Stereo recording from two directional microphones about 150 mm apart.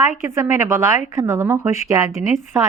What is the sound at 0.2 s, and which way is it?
A woman's voice, 15° right (ahead or behind).